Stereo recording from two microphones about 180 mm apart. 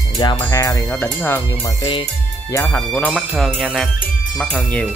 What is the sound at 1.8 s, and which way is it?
Speech, 25° left (ahead or behind).